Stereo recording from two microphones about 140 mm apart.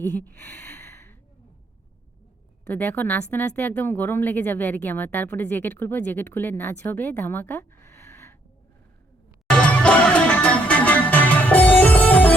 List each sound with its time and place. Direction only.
0.0 s speech: 15° left (ahead or behind)
2.6 s speech: 15° left (ahead or behind)
9.5 s music: 5° left (ahead or behind)